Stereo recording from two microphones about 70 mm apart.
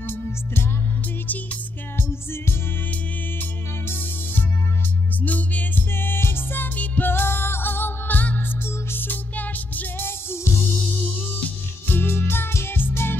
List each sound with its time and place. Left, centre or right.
0.0 s music: left
5.2 s music: left